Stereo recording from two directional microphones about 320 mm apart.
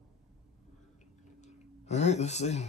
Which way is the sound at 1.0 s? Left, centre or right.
Left.